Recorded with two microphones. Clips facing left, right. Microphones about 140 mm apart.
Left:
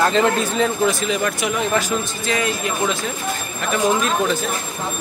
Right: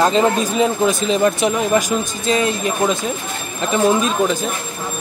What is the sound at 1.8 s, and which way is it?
Speech, 15° right (ahead or behind).